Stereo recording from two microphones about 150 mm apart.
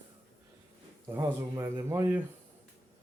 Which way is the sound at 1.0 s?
15° right (ahead or behind).